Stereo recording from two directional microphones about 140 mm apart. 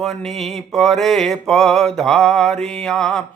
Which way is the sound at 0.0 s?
Centre (ahead or behind).